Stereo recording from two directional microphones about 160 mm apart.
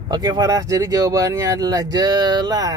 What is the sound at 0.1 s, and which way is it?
Speech, 25° right (ahead or behind).